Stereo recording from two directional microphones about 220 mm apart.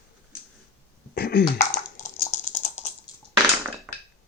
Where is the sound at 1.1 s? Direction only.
45° left (ahead or behind).